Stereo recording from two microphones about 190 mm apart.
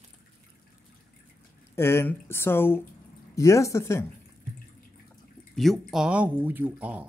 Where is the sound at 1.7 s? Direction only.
15° left (ahead or behind).